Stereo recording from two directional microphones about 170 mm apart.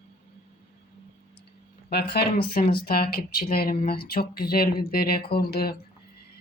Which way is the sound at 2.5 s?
60° left (ahead or behind).